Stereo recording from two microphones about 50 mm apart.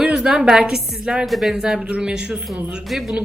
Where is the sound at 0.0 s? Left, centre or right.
Centre.